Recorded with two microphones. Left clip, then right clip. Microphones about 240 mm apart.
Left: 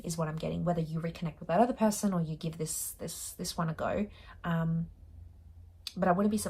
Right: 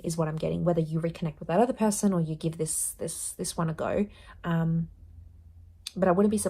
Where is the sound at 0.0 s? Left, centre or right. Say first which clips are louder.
Right 6 dB; right.